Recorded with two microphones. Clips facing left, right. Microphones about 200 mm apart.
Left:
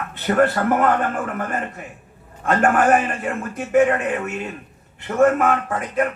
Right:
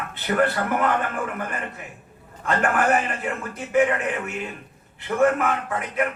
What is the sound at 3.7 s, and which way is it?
Speech, 45° left (ahead or behind).